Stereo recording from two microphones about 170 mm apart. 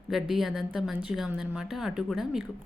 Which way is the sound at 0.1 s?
Centre (ahead or behind).